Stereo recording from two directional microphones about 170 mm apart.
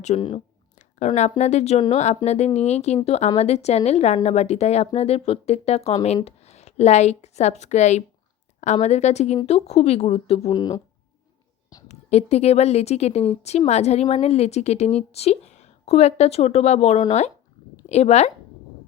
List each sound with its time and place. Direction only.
0.2 s speech: 30° left (ahead or behind)
0.8 s a woman's voice: 45° left (ahead or behind)
10.5 s speech: 25° left (ahead or behind)
11.9 s speech: 40° left (ahead or behind)